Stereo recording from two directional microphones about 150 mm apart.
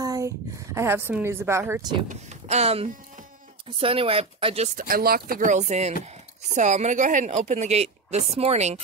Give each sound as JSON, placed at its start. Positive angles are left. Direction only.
{"t": 0.0, "sound": "a sound", "side_deg": -25}
{"t": 0.7, "sound": "a woman's voice", "side_deg": -15}
{"t": 2.0, "sound": "speech", "side_deg": -45}
{"t": 4.7, "sound": "speech", "side_deg": -75}